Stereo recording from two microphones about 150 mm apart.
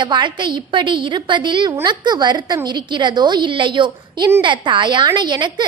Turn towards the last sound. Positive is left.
turn(degrees=-30)  # may be behind; listen again after turning